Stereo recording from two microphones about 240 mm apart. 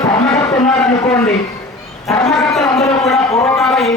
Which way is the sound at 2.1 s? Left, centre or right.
Centre.